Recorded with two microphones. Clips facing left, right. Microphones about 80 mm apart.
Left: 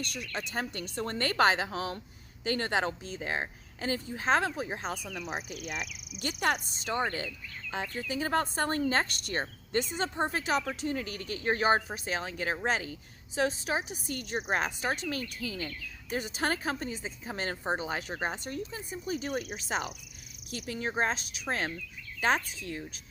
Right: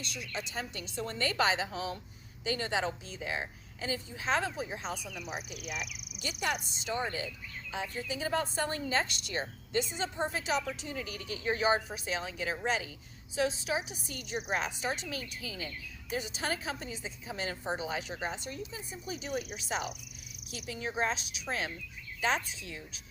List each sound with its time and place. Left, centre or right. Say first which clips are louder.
0.0 s speech: left 3 dB; left
5.3 s speech: left 2 dB; left
6.2 s speech: left 4 dB; left